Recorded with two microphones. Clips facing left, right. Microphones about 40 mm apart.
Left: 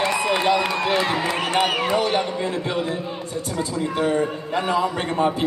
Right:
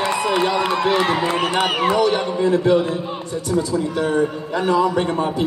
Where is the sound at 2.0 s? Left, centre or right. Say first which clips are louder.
Right 4 dB; left.